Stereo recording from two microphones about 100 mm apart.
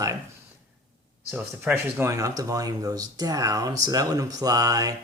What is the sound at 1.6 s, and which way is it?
Speech, 25° right (ahead or behind).